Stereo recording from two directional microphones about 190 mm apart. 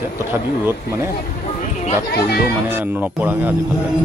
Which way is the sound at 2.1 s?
55° left (ahead or behind).